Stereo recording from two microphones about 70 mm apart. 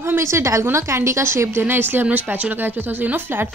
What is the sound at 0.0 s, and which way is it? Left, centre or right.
Speech, right.